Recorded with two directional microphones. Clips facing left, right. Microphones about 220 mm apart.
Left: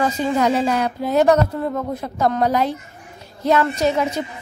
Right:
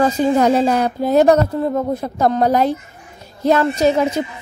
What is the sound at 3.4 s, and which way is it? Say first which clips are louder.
Speech: right 3 dB; 35° right (ahead or behind).